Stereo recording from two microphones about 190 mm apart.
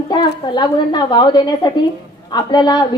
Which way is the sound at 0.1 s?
25° left (ahead or behind).